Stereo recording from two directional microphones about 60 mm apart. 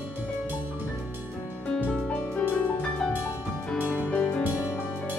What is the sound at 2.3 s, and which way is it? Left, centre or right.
Music, left.